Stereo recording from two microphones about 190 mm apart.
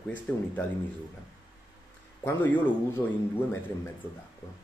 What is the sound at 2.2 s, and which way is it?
Speech, 10° left (ahead or behind).